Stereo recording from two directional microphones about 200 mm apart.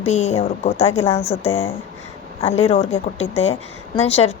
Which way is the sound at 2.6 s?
30° left (ahead or behind).